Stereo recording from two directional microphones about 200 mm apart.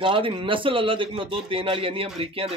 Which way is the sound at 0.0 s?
25° right (ahead or behind).